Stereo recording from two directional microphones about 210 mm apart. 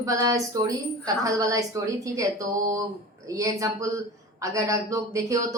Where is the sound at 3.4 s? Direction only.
15° right (ahead or behind).